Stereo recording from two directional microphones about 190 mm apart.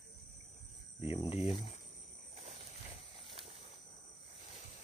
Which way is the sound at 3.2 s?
30° right (ahead or behind).